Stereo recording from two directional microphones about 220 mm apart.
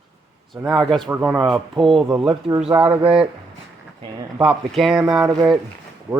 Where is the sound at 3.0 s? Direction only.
25° right (ahead or behind).